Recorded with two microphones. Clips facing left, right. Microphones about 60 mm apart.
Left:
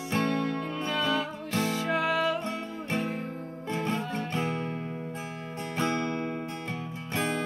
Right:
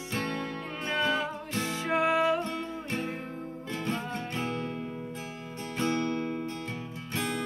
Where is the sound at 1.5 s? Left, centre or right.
Left.